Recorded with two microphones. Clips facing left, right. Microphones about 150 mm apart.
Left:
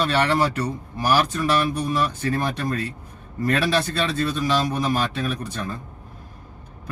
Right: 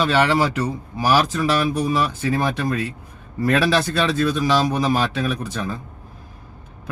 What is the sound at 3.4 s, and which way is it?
Speech, 90° right.